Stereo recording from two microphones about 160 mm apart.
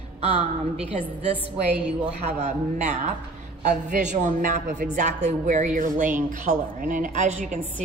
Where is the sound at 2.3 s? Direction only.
45° right (ahead or behind).